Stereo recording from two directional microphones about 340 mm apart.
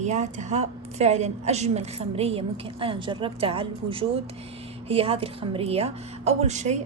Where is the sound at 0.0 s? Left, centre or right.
Right.